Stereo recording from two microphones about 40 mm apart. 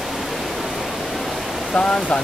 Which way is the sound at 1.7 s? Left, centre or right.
Centre.